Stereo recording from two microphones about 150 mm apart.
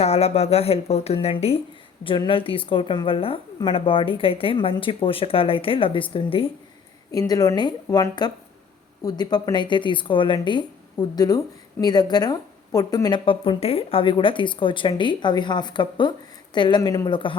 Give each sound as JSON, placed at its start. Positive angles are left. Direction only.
{"t": 0.0, "sound": "a woman's voice", "side_deg": 45}
{"t": 7.1, "sound": "a woman's voice", "side_deg": 25}